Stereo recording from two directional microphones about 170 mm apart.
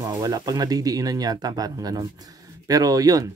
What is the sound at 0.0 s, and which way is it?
Speech, 25° right (ahead or behind).